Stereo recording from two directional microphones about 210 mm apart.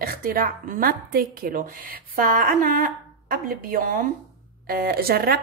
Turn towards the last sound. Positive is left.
turn(degrees=-45)  # may be behind; listen again after turning